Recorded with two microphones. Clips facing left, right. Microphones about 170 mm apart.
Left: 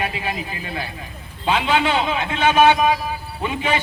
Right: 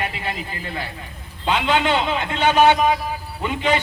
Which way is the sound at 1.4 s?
5° left (ahead or behind).